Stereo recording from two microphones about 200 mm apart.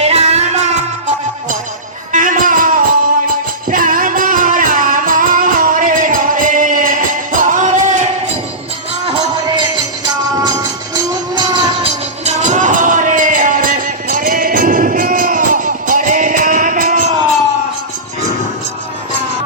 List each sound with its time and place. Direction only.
0.0 s music: 30° right (ahead or behind)
10.0 s music: 20° right (ahead or behind); by 17.2 s 35° right (ahead or behind)